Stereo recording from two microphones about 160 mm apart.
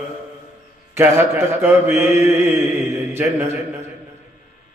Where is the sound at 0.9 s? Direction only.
15° right (ahead or behind).